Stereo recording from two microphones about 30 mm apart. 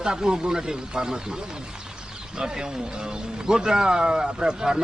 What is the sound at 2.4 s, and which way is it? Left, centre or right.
A man's voice, right.